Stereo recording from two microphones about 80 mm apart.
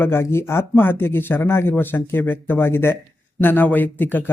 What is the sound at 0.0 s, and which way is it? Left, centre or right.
Speech, left.